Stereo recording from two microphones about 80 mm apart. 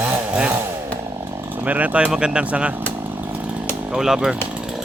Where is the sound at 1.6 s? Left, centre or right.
Centre.